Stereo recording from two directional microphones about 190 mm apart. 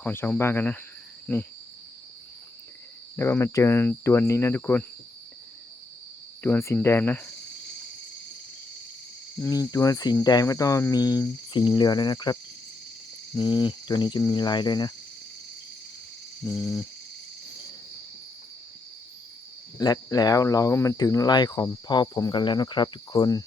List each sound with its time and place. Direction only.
0.0 s cricket: 10° left (ahead or behind)
3.2 s cricket: 15° left (ahead or behind)
6.4 s cricket: 15° left (ahead or behind)
9.4 s cricket: 20° left (ahead or behind)
16.4 s cricket: 15° left (ahead or behind)
19.8 s cricket: 20° left (ahead or behind)